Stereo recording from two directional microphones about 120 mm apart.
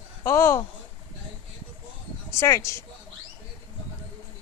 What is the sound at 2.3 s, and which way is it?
Speech, 25° left (ahead or behind).